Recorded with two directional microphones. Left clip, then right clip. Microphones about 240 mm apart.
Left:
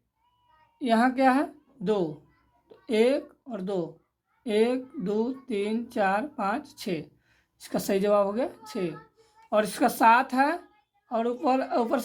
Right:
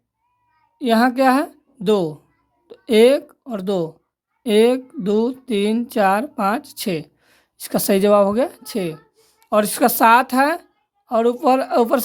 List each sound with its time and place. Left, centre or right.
0.8 s speech: right